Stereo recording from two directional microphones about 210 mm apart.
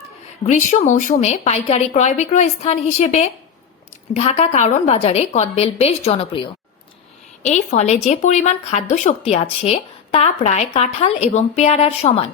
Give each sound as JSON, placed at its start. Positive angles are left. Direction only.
{"t": 0.4, "sound": "a woman's voice", "side_deg": 35}